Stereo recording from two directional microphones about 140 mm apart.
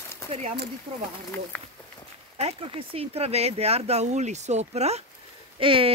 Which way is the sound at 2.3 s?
45° right (ahead or behind).